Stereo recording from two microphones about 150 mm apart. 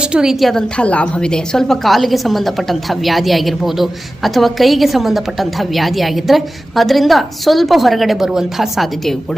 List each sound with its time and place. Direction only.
0.0 s a woman's voice: 5° right (ahead or behind)